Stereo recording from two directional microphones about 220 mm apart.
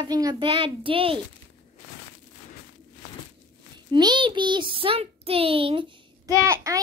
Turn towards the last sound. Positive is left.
turn(degrees=-15)  # may be behind; listen again after turning